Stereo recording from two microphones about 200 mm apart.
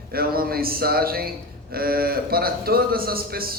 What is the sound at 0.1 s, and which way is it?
A man's voice, 50° right (ahead or behind).